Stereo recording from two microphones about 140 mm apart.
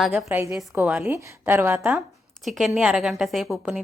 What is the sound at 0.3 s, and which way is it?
A woman's voice, 15° right (ahead or behind).